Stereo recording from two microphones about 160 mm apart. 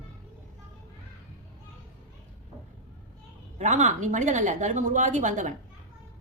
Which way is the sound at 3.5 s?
45° right (ahead or behind).